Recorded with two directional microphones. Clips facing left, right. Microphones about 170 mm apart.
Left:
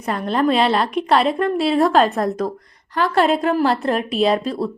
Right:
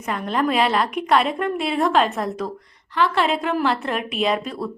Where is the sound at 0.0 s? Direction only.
35° left (ahead or behind).